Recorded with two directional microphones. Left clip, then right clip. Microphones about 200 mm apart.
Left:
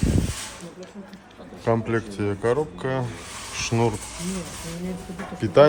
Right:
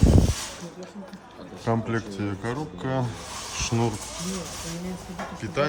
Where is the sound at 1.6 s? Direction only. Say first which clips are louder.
Left 4 dB; 10° right (ahead or behind).